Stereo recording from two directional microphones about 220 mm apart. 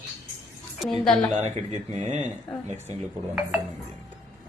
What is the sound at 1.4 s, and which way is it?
Speech, 35° right (ahead or behind).